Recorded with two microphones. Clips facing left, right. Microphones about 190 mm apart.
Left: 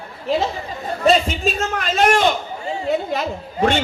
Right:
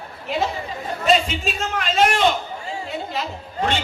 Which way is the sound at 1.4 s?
45° left (ahead or behind).